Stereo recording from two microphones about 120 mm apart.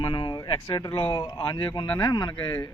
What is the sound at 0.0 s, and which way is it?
Speech, 40° left (ahead or behind).